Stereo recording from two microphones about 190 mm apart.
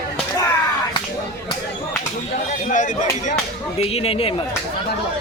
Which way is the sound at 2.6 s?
40° left (ahead or behind).